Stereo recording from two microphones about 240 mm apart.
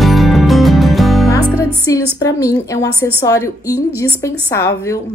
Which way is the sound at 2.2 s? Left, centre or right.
Centre.